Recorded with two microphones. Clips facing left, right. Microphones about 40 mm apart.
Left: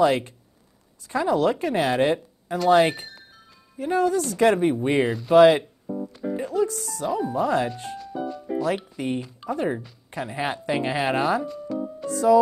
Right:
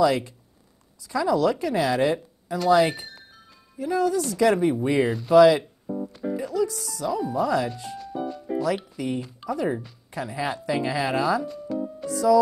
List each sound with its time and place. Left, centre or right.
0.0 s speech: left
3.7 s speech: left
5.0 s speech: centre
5.3 s speech: left
5.9 s music: centre
6.3 s speech: left
8.0 s music: centre
8.6 s speech: left
11.4 s music: centre
12.1 s music: left